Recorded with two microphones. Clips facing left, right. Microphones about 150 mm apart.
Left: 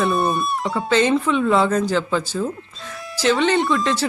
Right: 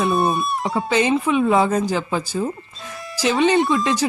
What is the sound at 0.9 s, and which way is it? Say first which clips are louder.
Speech: left 1 dB; 15° right (ahead or behind).